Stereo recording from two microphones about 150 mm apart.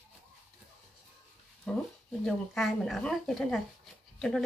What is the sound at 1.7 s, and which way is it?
Speech, 5° left (ahead or behind).